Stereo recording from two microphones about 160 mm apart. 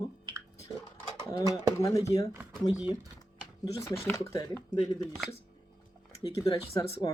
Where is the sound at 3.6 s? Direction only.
20° left (ahead or behind).